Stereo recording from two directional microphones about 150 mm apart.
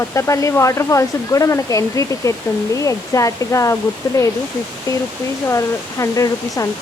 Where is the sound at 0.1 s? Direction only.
20° left (ahead or behind).